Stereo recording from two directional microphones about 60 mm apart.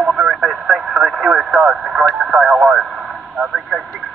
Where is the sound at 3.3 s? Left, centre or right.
Centre.